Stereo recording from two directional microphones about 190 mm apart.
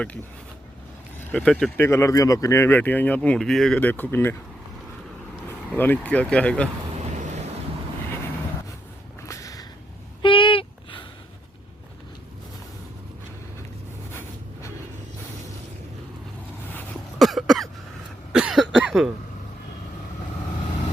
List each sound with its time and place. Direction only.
1.2 s speech: 10° left (ahead or behind)
5.7 s speech: 10° left (ahead or behind)
9.2 s whip: 15° left (ahead or behind)
10.2 s a sound: 25° left (ahead or behind)
14.1 s a sound: 10° left (ahead or behind)
16.7 s cough: 5° left (ahead or behind)